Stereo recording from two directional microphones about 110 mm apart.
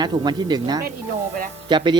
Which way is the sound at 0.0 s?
40° right (ahead or behind).